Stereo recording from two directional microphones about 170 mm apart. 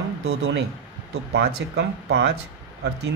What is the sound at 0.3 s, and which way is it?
Speech, 90° right.